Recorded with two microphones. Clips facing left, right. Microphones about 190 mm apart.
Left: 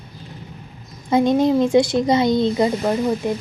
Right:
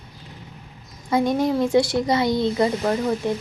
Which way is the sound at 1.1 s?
20° left (ahead or behind).